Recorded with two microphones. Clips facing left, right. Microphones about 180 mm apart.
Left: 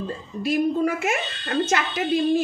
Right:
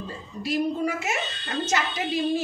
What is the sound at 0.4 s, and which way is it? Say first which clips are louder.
A woman's voice: left 4 dB; 55° left (ahead or behind).